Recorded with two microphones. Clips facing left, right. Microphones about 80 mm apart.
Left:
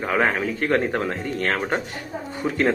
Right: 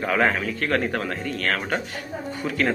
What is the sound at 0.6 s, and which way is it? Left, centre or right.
A man's voice, left.